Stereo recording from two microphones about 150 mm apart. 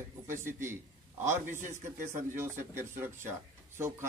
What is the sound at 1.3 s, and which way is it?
Speech, 55° right (ahead or behind).